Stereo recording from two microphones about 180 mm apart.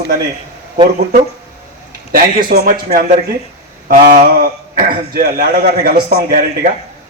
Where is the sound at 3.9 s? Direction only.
50° right (ahead or behind).